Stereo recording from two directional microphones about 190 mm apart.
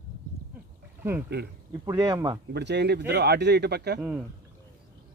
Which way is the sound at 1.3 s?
60° right (ahead or behind).